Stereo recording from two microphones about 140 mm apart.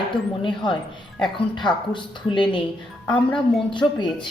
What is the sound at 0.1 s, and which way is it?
Speech, 35° left (ahead or behind).